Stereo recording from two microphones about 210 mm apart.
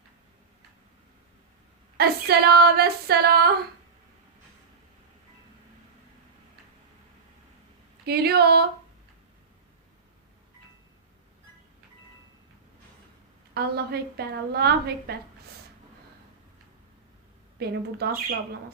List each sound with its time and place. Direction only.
2.0 s a woman's voice: 50° right (ahead or behind)
8.0 s a woman's voice: 50° right (ahead or behind)
13.5 s a woman's voice: 50° right (ahead or behind)
17.6 s a woman's voice: 50° right (ahead or behind)